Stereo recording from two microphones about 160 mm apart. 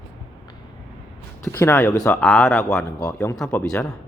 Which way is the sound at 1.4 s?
15° left (ahead or behind).